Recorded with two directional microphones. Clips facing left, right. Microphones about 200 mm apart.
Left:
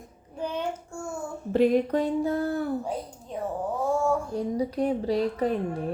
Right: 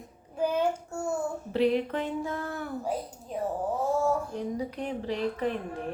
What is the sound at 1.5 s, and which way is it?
Speech, 45° left (ahead or behind).